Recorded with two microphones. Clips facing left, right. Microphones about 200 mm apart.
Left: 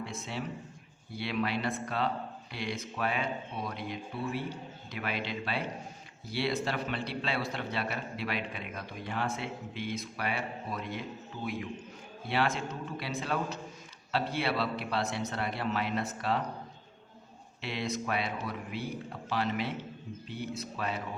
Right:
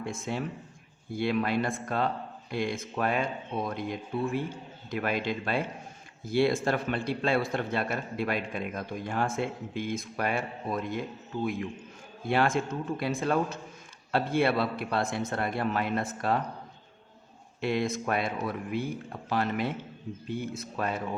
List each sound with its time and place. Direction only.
0.0 s a man's voice: 50° right (ahead or behind)
12.2 s a man's voice: 50° right (ahead or behind)
17.6 s a man's voice: 50° right (ahead or behind)